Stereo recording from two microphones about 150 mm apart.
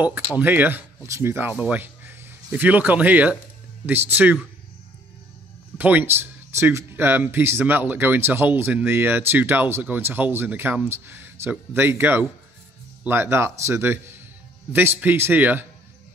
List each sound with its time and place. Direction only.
0.4 s speech: 10° right (ahead or behind)
5.8 s speech: 10° right (ahead or behind)